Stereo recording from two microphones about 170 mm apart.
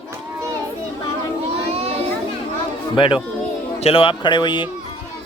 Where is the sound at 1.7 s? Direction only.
35° right (ahead or behind).